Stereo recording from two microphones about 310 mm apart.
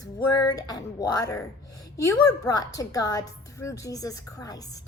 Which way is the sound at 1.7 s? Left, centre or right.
Left.